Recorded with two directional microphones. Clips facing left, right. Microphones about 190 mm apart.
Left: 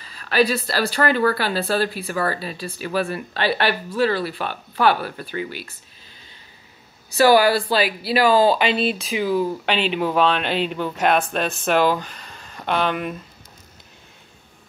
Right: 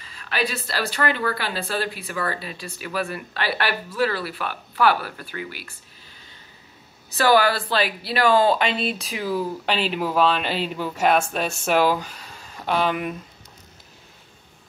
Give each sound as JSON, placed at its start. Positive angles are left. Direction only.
{"t": 0.0, "sound": "speech", "side_deg": 40}
{"t": 7.2, "sound": "speech", "side_deg": 10}